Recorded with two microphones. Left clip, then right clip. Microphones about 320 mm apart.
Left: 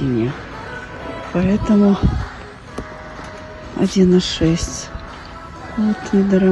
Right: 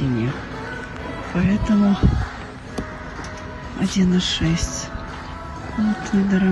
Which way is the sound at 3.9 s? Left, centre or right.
Centre.